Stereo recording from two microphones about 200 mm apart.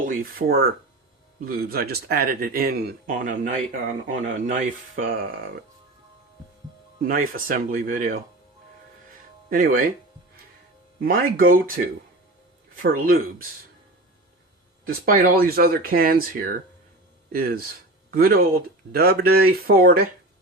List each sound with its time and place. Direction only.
0.0 s speech: 45° right (ahead or behind)
7.1 s speech: 45° right (ahead or behind)
9.5 s speech: 45° right (ahead or behind)
11.0 s speech: 45° right (ahead or behind)
12.7 s speech: 45° right (ahead or behind)
14.8 s speech: 45° right (ahead or behind)